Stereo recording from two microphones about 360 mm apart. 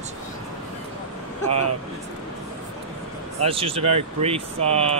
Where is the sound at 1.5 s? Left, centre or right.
Right.